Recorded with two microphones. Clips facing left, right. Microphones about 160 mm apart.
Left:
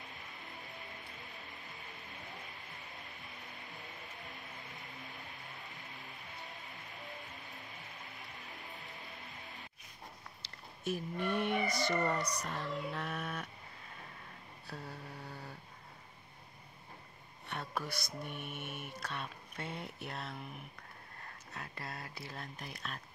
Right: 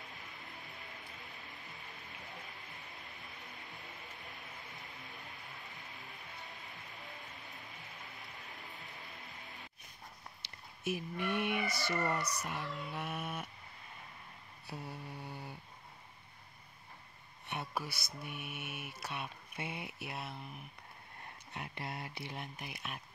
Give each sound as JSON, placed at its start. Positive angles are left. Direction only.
{"t": 10.8, "sound": "mantra", "side_deg": -10}
{"t": 11.7, "sound": "speech", "side_deg": 15}
{"t": 12.4, "sound": "mantra", "side_deg": -10}
{"t": 14.7, "sound": "mantra", "side_deg": -15}
{"t": 17.5, "sound": "a sound", "side_deg": -10}
{"t": 18.2, "sound": "mantra", "side_deg": -10}
{"t": 21.5, "sound": "speech", "side_deg": -20}